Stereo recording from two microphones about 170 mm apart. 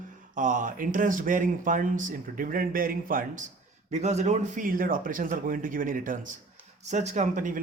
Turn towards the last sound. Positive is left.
turn(degrees=-50)  # may be behind; listen again after turning